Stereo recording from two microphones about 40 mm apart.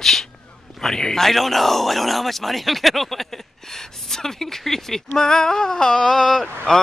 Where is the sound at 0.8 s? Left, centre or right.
Centre.